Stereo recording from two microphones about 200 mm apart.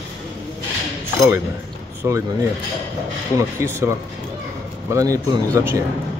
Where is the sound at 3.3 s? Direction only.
15° right (ahead or behind).